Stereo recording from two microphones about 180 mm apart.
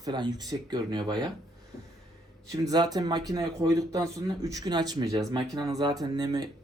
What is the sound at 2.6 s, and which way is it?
Speech, 20° right (ahead or behind).